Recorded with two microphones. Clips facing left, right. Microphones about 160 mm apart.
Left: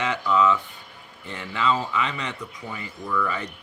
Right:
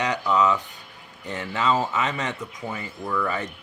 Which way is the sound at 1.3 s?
45° right (ahead or behind).